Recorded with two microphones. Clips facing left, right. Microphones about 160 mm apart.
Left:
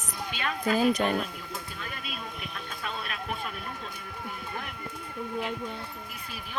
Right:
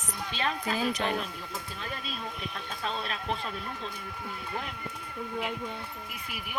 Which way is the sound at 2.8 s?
30° right (ahead or behind).